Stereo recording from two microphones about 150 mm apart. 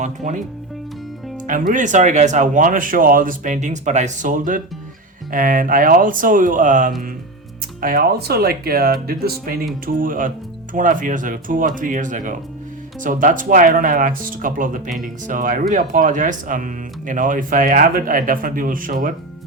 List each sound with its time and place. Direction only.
0.0 s speech: 55° right (ahead or behind)
1.5 s speech: 60° right (ahead or behind)
7.8 s speech: 80° right
9.8 s speech: 70° right (ahead or behind)